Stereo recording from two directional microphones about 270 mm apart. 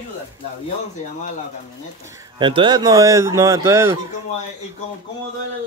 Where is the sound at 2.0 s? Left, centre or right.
Centre.